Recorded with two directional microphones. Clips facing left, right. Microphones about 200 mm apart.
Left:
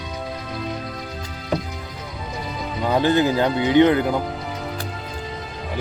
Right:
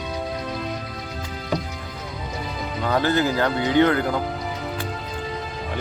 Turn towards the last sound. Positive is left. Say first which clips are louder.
# left 3 dB
turn(degrees=20)  # may be behind; listen again after turning